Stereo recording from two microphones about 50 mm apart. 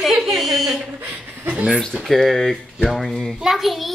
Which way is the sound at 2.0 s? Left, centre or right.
Centre.